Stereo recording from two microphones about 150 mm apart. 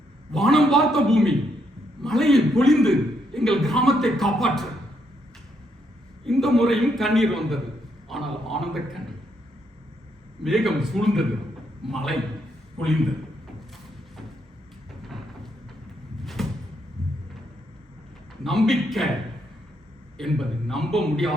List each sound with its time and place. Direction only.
0.3 s a man's voice: centre (ahead or behind)
6.2 s a man's voice: centre (ahead or behind)
8.1 s a sound: centre (ahead or behind)
10.4 s a man's voice: centre (ahead or behind)
16.2 s cupboard open or close: centre (ahead or behind)
18.4 s a man's voice: centre (ahead or behind)
20.1 s a man's voice: centre (ahead or behind)